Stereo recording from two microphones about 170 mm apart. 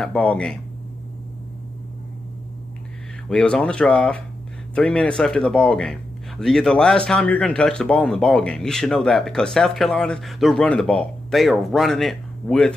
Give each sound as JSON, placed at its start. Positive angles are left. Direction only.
{"t": 0.0, "sound": "speech", "side_deg": 5}
{"t": 3.3, "sound": "speech", "side_deg": 5}